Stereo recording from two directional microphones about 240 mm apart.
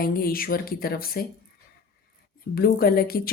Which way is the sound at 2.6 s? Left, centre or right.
Left.